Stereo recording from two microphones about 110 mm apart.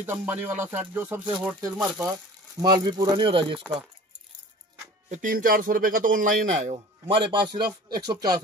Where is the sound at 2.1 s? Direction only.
40° right (ahead or behind).